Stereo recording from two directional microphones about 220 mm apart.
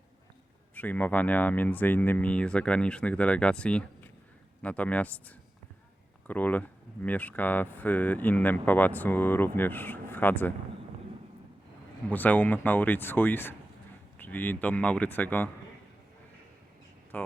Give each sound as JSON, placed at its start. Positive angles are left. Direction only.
{"t": 0.7, "sound": "speech", "side_deg": 10}
{"t": 12.0, "sound": "speech", "side_deg": 10}
{"t": 17.1, "sound": "speech", "side_deg": 5}